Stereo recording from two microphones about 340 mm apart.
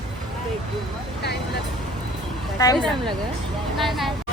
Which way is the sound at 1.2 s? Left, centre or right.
Left.